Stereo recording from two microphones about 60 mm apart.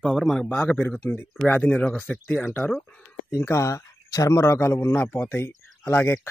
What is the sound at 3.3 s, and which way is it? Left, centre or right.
Speech, left.